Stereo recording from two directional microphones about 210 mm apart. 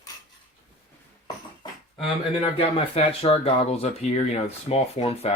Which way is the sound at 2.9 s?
30° left (ahead or behind).